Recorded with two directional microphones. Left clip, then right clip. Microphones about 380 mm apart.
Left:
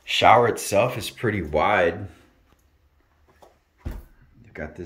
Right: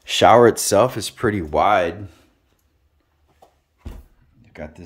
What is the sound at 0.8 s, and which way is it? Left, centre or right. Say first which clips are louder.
Speech: right 4 dB; centre.